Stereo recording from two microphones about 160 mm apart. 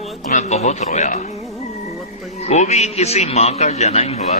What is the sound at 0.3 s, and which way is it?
Speech, 45° left (ahead or behind).